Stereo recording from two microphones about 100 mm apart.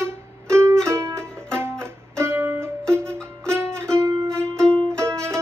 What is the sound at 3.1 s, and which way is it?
Music, 25° right (ahead or behind).